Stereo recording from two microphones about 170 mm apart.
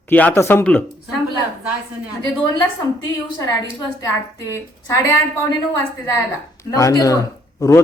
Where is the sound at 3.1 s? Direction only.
20° left (ahead or behind).